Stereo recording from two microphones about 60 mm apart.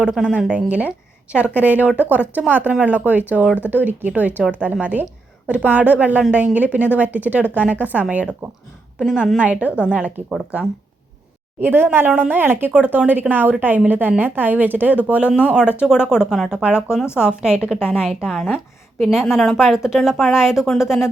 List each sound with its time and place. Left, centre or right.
0.0 s speech: centre
11.6 s a woman's voice: right; by 21.1 s centre